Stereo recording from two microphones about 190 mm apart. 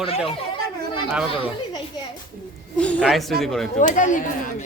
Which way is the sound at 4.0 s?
40° left (ahead or behind).